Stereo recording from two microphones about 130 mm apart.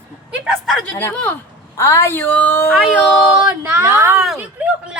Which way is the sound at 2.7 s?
5° right (ahead or behind).